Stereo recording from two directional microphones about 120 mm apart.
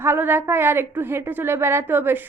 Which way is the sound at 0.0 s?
20° right (ahead or behind).